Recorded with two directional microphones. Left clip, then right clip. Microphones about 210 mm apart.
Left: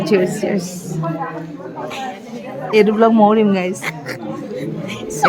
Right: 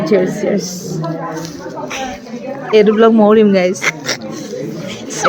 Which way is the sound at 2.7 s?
10° left (ahead or behind).